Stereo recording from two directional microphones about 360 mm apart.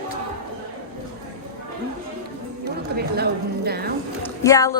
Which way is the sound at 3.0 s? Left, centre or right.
Right.